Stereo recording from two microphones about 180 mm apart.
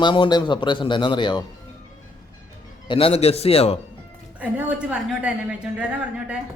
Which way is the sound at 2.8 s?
30° left (ahead or behind).